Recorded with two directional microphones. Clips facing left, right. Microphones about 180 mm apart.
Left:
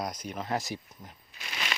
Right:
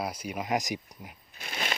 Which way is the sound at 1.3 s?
50° right (ahead or behind).